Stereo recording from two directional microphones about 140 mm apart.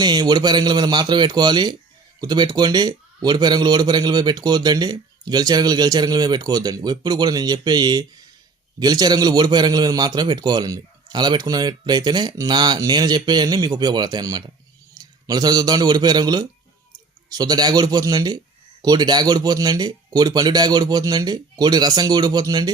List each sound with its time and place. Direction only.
0.0 s a man's voice: 30° right (ahead or behind)